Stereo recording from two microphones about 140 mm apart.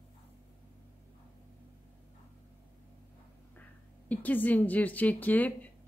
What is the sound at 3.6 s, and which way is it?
Speech, 10° left (ahead or behind).